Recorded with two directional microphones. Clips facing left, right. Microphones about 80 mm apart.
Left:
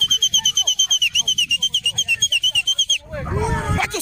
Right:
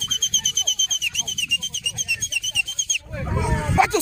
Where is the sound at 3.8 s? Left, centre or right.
Centre.